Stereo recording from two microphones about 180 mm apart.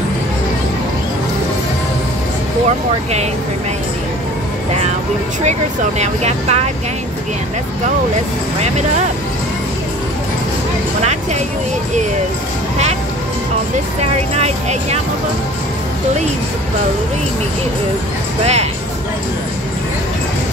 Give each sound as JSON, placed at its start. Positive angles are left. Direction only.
{"t": 5.4, "sound": "speech", "side_deg": -40}
{"t": 14.3, "sound": "speech", "side_deg": -35}
{"t": 18.4, "sound": "speech", "side_deg": -35}